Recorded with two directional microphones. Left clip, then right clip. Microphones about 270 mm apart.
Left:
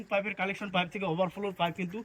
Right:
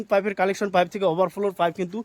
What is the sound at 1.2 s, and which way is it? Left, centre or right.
Speech, centre.